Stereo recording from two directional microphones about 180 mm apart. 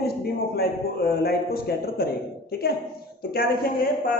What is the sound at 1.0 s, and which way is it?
A woman's voice, 60° left (ahead or behind).